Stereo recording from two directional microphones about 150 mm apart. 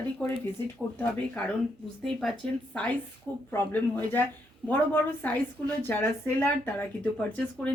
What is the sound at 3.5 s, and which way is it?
Speech, 15° left (ahead or behind).